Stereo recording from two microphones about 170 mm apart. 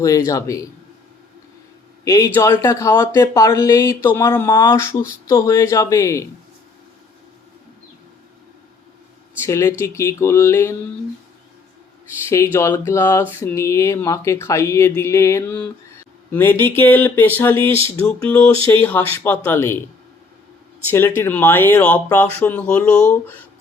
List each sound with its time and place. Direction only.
0.3 s speech: 20° left (ahead or behind)
2.0 s speech: 15° left (ahead or behind)
9.5 s speech: 15° left (ahead or behind)
12.3 s speech: 15° left (ahead or behind)
21.2 s speech: 10° left (ahead or behind)